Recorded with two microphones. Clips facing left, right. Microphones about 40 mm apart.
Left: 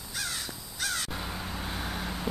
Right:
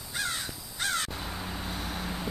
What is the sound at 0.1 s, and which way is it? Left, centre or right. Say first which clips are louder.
Crow: right 3 dB; centre.